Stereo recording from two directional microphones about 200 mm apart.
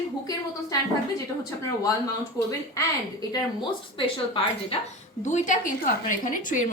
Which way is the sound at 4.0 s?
25° left (ahead or behind).